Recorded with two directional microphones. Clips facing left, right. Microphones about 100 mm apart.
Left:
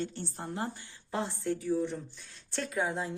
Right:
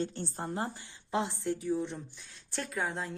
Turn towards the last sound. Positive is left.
turn(degrees=5)  # may be behind; listen again after turning